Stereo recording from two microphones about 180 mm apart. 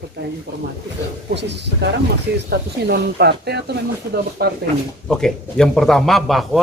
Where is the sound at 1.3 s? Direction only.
70° right (ahead or behind).